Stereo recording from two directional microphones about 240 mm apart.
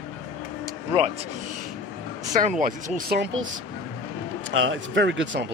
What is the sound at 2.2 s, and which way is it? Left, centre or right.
Speech, right.